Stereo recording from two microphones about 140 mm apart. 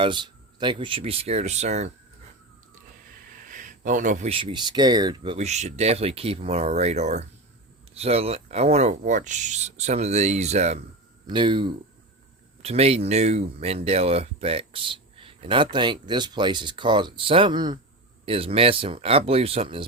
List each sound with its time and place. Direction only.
0.0 s speech: 35° right (ahead or behind); by 1.9 s 55° right (ahead or behind)
3.5 s a sound: 70° right (ahead or behind)
4.3 s speech: 40° right (ahead or behind)
5.4 s speech: 55° right (ahead or behind)
11.3 s speech: 35° right (ahead or behind)
12.6 s speech: 45° right (ahead or behind)